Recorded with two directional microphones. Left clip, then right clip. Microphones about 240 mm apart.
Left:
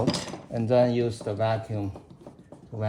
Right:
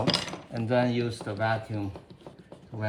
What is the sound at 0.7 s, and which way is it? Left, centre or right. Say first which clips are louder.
Speech: left 4 dB; left.